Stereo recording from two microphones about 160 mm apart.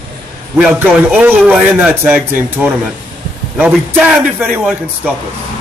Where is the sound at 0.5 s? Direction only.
10° right (ahead or behind).